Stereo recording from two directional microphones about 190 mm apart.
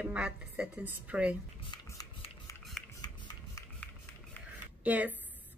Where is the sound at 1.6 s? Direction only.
20° left (ahead or behind).